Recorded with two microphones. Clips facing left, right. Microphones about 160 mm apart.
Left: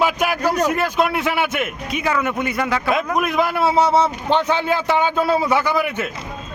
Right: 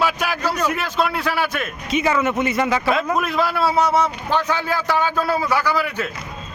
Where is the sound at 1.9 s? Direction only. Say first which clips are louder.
Right 4 dB; centre (ahead or behind).